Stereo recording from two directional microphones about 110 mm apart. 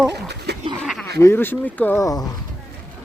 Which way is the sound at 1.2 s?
20° left (ahead or behind).